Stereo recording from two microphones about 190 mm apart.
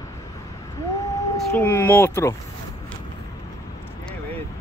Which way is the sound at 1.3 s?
15° left (ahead or behind).